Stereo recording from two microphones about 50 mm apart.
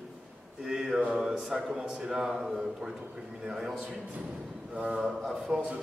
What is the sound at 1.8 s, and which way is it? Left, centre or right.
A man's voice, centre.